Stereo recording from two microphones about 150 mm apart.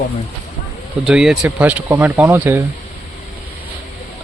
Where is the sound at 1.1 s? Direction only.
Centre (ahead or behind).